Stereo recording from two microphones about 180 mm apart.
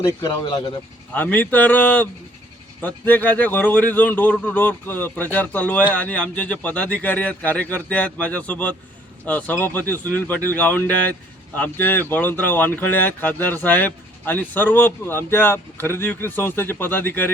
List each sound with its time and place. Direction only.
0.0 s speech: 20° left (ahead or behind)
1.1 s speech: 10° left (ahead or behind)